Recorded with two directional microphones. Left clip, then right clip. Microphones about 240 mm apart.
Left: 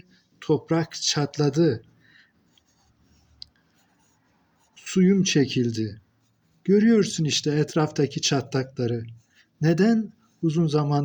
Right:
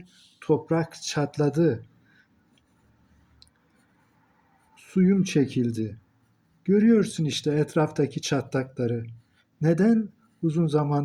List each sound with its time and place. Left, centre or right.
0.4 s speech: left
4.9 s a man's voice: left